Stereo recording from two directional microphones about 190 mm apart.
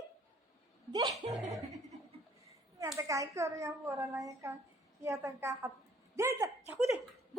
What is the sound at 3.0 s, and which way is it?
A child's voice, 15° right (ahead or behind).